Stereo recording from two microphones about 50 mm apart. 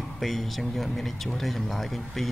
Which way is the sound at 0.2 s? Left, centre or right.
Centre.